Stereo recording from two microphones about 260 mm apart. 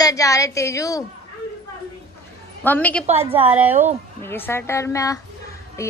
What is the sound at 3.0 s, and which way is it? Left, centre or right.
Speech, right.